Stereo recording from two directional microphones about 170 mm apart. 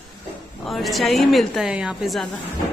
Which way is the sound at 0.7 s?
Centre (ahead or behind).